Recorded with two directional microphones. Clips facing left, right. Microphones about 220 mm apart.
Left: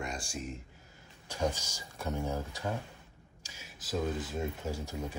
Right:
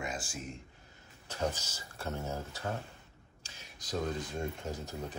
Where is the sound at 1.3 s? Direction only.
10° left (ahead or behind).